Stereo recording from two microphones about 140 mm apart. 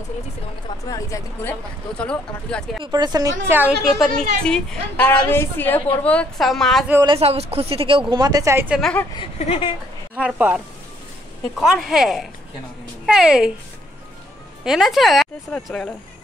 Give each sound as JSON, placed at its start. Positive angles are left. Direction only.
{"t": 1.4, "sound": "a woman's voice", "side_deg": 10}
{"t": 2.8, "sound": "a woman's voice", "side_deg": -30}
{"t": 4.0, "sound": "a woman's voice", "side_deg": 5}
{"t": 7.2, "sound": "a woman's voice", "side_deg": -45}
{"t": 8.1, "sound": "a woman's voice", "side_deg": -25}
{"t": 9.4, "sound": "speech", "side_deg": 45}
{"t": 10.1, "sound": "speech", "side_deg": -10}
{"t": 14.6, "sound": "a woman's voice", "side_deg": 0}